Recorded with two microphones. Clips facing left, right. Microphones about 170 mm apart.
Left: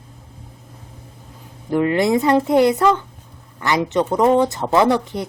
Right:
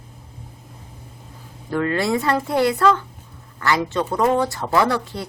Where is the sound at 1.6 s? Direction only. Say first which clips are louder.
Left 4 dB; 15° left (ahead or behind).